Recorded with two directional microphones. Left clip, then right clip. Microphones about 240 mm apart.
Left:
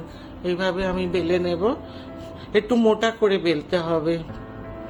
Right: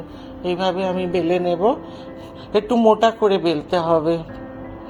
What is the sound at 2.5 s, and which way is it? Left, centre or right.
Speech, left.